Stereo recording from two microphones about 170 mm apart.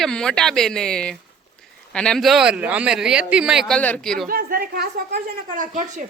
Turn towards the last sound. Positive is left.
turn(degrees=-50)  # may be behind; listen again after turning